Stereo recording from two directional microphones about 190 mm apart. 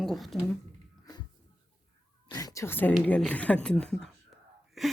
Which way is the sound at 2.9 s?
5° left (ahead or behind).